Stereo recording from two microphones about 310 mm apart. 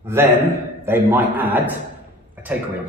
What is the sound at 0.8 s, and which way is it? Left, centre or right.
Speech, centre.